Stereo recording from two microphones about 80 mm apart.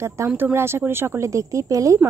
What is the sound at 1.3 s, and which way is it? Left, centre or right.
Speech, right.